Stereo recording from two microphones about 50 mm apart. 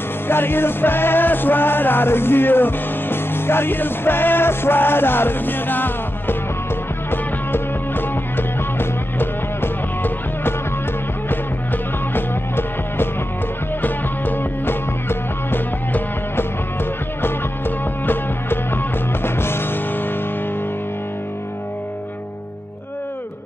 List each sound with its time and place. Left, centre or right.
0.3 s music: left
17.2 s music: left